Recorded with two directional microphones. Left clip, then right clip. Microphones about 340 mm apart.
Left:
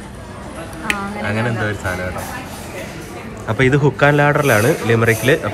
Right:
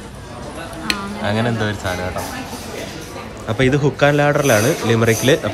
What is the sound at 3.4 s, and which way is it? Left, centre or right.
Speech, centre.